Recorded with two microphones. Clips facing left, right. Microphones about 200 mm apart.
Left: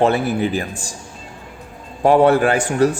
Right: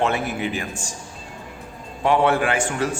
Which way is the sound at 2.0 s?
40° left (ahead or behind).